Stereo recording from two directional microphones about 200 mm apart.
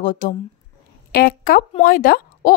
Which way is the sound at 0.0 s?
40° left (ahead or behind).